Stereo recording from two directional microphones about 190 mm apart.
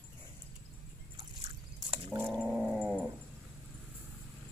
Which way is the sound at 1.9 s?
20° right (ahead or behind).